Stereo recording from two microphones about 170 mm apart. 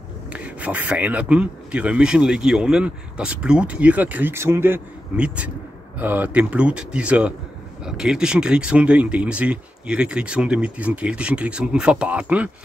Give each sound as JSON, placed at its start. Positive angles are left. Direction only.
{"t": 0.3, "sound": "speech", "side_deg": -10}